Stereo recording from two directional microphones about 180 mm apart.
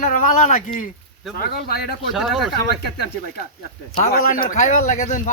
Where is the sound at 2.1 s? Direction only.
Centre (ahead or behind).